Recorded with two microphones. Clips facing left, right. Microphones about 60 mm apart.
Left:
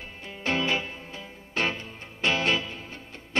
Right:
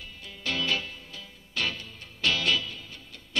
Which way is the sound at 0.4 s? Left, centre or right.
Left.